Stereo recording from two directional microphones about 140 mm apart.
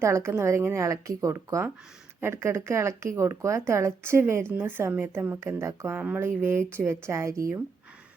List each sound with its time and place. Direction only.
0.0 s a woman's voice: 20° right (ahead or behind)